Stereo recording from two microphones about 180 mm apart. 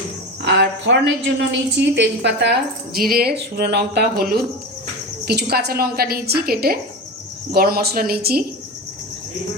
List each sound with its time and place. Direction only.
0.4 s a woman's voice: 75° right (ahead or behind); by 8.4 s 60° right (ahead or behind)